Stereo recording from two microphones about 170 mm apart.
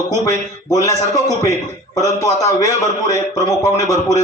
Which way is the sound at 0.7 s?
20° left (ahead or behind).